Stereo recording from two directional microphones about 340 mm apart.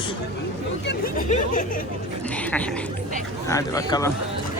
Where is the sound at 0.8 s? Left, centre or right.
Left.